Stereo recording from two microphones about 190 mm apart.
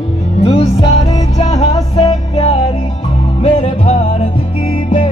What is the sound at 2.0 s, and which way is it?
Music, 35° left (ahead or behind).